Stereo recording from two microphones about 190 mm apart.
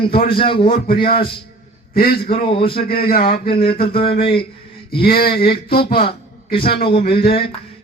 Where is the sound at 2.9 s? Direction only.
50° left (ahead or behind).